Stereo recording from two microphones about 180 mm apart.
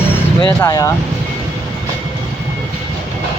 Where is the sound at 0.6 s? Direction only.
20° left (ahead or behind).